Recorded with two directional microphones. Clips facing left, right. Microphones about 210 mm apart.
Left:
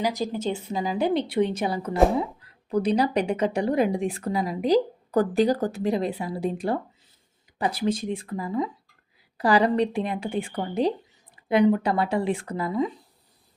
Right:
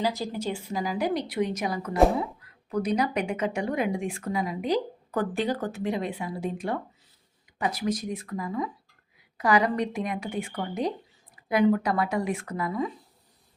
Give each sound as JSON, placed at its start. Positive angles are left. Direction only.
{"t": 0.0, "sound": "a woman's voice", "side_deg": 15}